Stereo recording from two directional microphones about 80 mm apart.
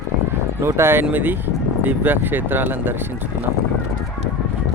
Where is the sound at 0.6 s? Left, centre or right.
Right.